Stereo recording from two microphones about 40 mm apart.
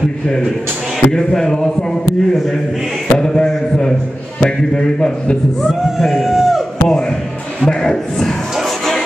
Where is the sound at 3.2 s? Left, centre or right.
Centre.